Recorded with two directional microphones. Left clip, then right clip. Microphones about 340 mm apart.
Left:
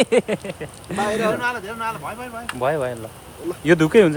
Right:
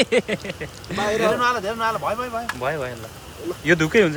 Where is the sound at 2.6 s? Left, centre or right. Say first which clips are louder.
Left 4 dB; centre.